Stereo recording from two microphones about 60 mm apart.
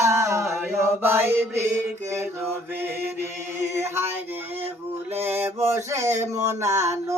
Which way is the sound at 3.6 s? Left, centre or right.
Right.